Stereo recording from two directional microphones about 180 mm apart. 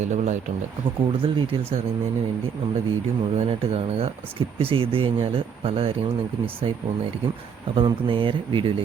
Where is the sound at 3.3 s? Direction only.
40° right (ahead or behind).